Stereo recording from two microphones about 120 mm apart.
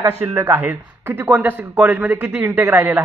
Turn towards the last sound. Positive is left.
turn(degrees=-20)  # may be behind; listen again after turning